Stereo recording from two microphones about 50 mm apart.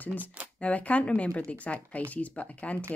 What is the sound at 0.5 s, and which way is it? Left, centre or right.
Speech, left.